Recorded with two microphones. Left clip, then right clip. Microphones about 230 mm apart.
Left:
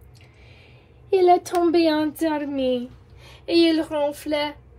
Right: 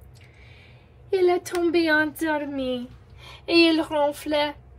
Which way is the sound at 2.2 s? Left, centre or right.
Centre.